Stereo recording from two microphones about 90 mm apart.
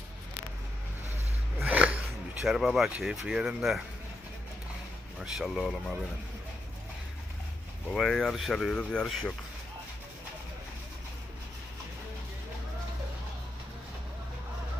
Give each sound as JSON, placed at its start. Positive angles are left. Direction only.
{"t": 1.6, "sound": "a sound", "side_deg": -15}
{"t": 2.4, "sound": "speech", "side_deg": -5}
{"t": 5.2, "sound": "speech", "side_deg": -5}
{"t": 7.9, "sound": "speech", "side_deg": 5}
{"t": 8.7, "sound": "speech", "side_deg": 10}